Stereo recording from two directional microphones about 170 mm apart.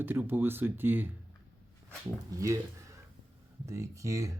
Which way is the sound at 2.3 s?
20° right (ahead or behind).